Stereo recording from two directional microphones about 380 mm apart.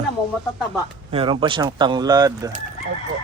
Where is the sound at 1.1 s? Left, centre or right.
Centre.